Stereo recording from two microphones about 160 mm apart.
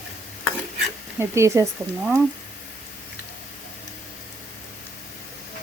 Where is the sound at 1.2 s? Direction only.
15° right (ahead or behind).